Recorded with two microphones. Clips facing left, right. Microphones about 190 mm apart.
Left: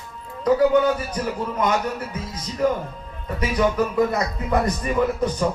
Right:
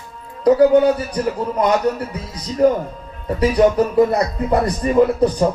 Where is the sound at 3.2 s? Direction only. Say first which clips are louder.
Right 7 dB; 35° right (ahead or behind).